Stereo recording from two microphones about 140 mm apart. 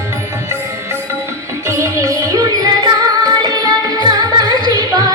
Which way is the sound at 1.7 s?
20° right (ahead or behind).